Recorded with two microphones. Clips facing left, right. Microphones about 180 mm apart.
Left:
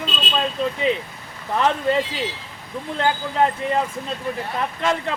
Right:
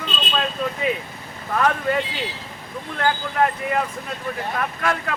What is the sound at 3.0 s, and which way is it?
Speech, 25° left (ahead or behind).